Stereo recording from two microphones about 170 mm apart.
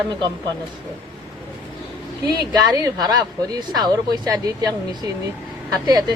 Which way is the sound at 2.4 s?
25° right (ahead or behind).